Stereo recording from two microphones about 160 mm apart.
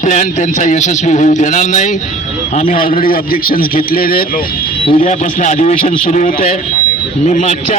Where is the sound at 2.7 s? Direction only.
65° left (ahead or behind).